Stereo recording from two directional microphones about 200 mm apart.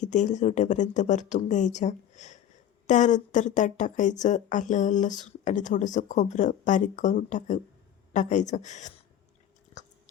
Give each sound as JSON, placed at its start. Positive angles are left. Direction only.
{"t": 0.0, "sound": "speech", "side_deg": 35}